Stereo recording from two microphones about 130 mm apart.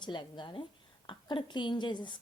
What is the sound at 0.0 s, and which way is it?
A woman's voice, 35° left (ahead or behind).